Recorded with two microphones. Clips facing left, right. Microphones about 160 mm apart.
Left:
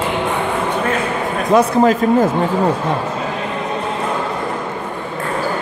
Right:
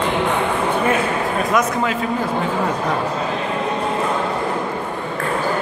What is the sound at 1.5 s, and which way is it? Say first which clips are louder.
Speech: left 10 dB; 35° left (ahead or behind).